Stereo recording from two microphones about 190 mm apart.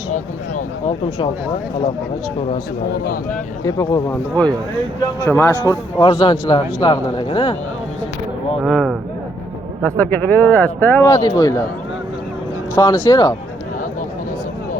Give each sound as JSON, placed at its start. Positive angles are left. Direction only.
{"t": 3.6, "sound": "speech", "side_deg": 15}
{"t": 6.0, "sound": "a man's voice", "side_deg": 25}
{"t": 8.6, "sound": "speech", "side_deg": 0}
{"t": 9.8, "sound": "speech", "side_deg": 10}
{"t": 11.1, "sound": "a man's voice", "side_deg": 20}
{"t": 12.7, "sound": "a man's voice", "side_deg": 20}